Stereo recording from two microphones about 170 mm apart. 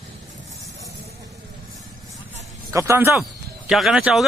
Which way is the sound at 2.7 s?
15° right (ahead or behind).